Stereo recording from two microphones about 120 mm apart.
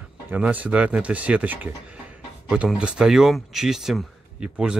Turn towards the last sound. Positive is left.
turn(degrees=-5)  # may be behind; listen again after turning